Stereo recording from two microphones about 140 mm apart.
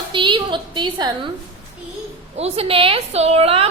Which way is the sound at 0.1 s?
35° right (ahead or behind).